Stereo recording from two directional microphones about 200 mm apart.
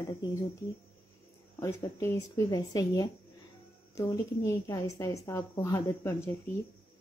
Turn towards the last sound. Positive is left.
turn(degrees=15)  # may be behind; listen again after turning